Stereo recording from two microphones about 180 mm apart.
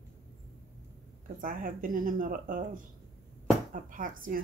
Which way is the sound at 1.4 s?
50° right (ahead or behind).